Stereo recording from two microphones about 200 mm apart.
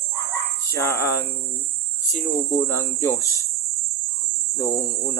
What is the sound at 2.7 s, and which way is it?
Speech, 15° left (ahead or behind).